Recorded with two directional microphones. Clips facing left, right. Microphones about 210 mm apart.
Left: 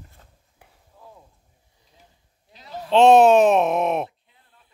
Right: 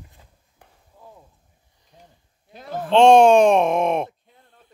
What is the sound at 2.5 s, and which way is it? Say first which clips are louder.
Speech: right 6 dB; 50° right (ahead or behind).